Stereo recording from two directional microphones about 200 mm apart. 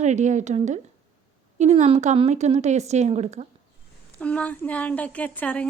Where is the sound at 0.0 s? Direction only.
35° right (ahead or behind).